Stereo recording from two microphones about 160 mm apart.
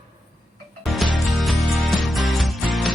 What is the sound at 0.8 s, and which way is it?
Music, centre (ahead or behind).